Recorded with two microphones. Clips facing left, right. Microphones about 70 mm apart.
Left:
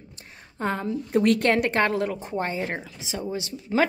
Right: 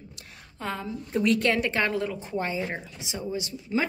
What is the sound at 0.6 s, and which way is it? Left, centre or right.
Speech, left.